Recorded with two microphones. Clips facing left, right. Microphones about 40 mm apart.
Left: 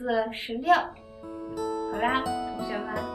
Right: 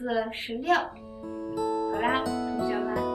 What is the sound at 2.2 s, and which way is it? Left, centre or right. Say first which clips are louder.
Speech: right 1 dB; centre.